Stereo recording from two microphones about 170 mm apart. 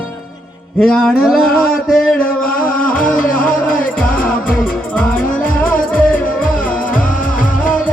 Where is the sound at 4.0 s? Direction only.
55° left (ahead or behind).